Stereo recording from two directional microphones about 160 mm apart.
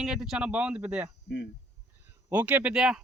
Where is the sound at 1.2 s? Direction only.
90° left.